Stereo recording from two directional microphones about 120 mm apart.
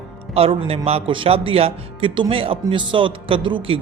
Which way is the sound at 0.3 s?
55° right (ahead or behind).